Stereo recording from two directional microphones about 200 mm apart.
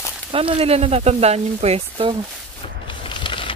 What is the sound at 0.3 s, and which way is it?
Speech, 30° right (ahead or behind).